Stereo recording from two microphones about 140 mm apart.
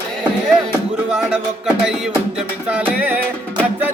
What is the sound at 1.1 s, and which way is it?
Music, 5° right (ahead or behind).